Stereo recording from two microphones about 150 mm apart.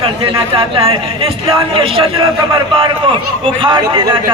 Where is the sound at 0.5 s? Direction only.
40° right (ahead or behind).